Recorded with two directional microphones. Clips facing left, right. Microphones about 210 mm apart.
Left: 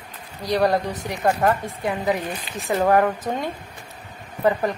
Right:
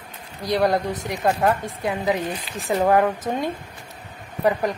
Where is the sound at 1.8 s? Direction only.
20° right (ahead or behind).